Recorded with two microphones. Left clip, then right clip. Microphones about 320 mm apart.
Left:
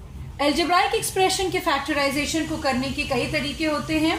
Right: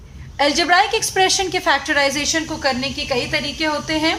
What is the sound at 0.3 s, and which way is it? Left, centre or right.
A woman's voice, right.